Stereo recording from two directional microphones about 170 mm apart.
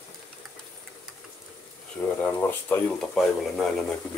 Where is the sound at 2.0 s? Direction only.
10° left (ahead or behind).